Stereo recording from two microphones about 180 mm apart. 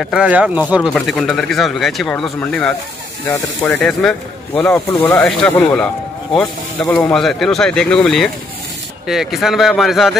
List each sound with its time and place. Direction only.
0.0 s speech: 5° right (ahead or behind)
3.3 s speech: 15° left (ahead or behind)
3.8 s speech: 5° left (ahead or behind)